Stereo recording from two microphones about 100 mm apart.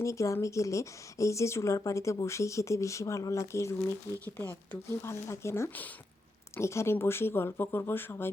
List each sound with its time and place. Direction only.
0.0 s a woman's voice: 30° left (ahead or behind)